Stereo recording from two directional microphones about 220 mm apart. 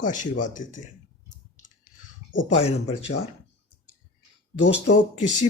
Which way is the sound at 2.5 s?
30° left (ahead or behind).